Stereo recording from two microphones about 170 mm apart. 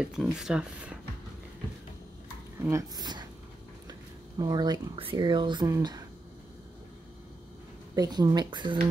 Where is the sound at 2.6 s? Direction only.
20° right (ahead or behind).